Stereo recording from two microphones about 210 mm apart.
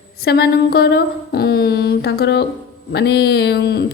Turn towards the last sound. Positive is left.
turn(degrees=50)  # may be behind; listen again after turning